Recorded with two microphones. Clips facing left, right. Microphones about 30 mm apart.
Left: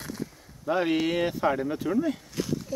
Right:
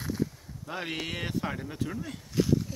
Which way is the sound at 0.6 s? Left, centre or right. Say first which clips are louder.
Left 10 dB; centre.